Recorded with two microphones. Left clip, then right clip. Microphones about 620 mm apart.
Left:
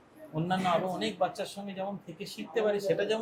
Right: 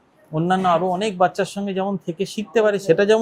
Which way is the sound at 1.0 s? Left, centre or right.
Right.